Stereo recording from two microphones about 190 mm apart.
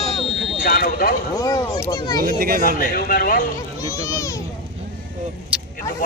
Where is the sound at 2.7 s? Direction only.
50° left (ahead or behind).